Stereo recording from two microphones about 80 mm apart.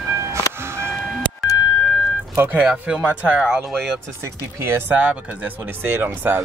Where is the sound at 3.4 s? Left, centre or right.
Centre.